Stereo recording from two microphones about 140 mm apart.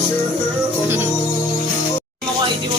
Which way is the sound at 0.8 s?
15° right (ahead or behind).